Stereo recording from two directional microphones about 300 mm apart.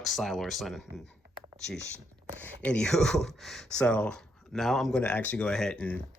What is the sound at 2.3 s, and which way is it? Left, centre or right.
Speech, centre.